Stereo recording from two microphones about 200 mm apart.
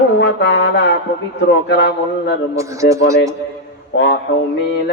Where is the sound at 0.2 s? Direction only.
60° left (ahead or behind).